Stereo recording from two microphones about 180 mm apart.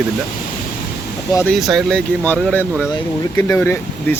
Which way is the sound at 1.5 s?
Centre (ahead or behind).